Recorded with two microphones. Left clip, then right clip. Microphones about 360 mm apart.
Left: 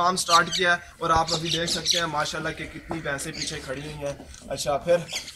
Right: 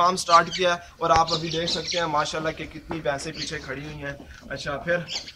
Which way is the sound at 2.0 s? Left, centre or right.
Centre.